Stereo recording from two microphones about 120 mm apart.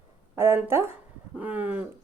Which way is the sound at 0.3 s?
20° right (ahead or behind).